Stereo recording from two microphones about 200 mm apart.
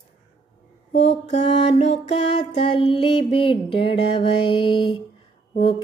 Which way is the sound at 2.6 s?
25° left (ahead or behind).